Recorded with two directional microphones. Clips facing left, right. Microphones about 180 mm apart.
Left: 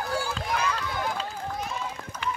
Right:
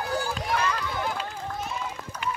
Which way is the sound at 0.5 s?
5° left (ahead or behind).